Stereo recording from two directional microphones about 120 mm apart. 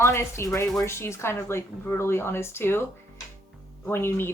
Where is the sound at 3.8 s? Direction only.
20° left (ahead or behind).